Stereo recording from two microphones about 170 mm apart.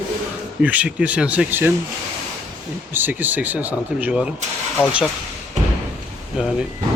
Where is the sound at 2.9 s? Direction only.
10° right (ahead or behind).